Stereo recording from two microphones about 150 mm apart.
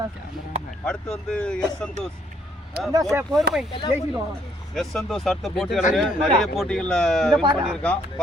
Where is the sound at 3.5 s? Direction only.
90° right.